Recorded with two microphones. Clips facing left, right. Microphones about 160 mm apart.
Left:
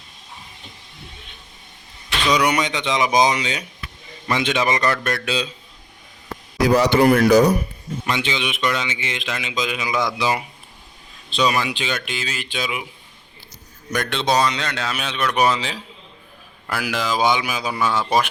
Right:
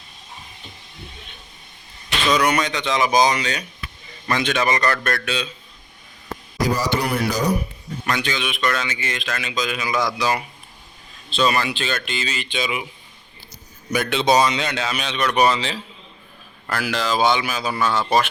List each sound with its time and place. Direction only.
2.3 s speech: 15° left (ahead or behind)
6.7 s speech: 70° left (ahead or behind)
8.0 s speech: 20° left (ahead or behind); by 12.9 s 5° left (ahead or behind)
13.9 s a man's voice: 5° right (ahead or behind); by 18.0 s 10° left (ahead or behind)